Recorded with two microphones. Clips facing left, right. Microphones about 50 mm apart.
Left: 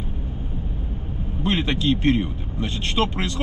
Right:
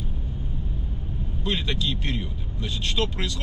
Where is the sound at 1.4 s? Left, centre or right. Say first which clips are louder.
Left 5 dB; left.